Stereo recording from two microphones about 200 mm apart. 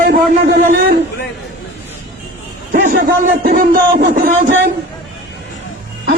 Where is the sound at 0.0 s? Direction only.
45° right (ahead or behind).